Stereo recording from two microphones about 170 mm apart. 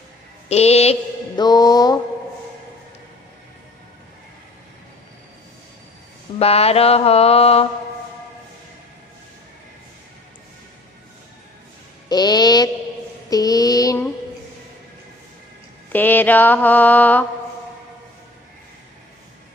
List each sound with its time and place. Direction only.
0.5 s mantra: 40° left (ahead or behind)
1.3 s music: 25° left (ahead or behind)
6.4 s mantra: 35° left (ahead or behind)
12.1 s music: 25° left (ahead or behind)
13.3 s child singing: 20° left (ahead or behind)
15.9 s mantra: 10° left (ahead or behind)